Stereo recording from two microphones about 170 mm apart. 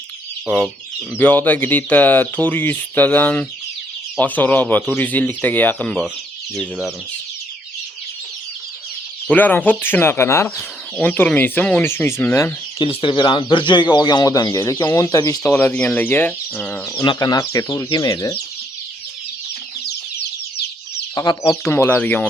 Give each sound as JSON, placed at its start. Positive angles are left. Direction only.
{"t": 0.4, "sound": "speech", "side_deg": 5}
{"t": 9.2, "sound": "speech", "side_deg": 10}
{"t": 12.8, "sound": "speech", "side_deg": 30}
{"t": 17.0, "sound": "speech", "side_deg": 25}
{"t": 21.2, "sound": "speech", "side_deg": 25}